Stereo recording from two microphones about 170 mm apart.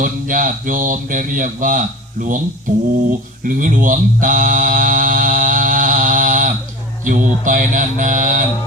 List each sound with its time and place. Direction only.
0.0 s speech: 50° right (ahead or behind)
3.1 s a sound: 50° right (ahead or behind)
7.0 s speech: 50° right (ahead or behind)